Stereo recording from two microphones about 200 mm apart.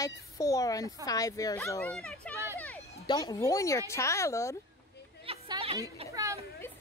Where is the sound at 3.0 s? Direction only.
20° left (ahead or behind).